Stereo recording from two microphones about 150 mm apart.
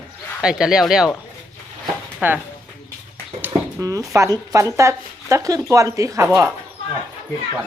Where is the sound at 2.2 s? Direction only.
10° right (ahead or behind).